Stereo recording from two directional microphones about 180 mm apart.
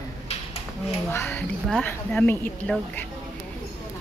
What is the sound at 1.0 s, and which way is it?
Speech, 10° left (ahead or behind).